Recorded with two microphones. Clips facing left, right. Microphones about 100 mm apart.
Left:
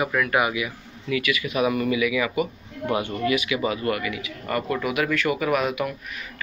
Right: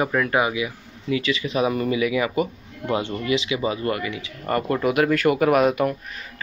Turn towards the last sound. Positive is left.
turn(degrees=-40)  # may be behind; listen again after turning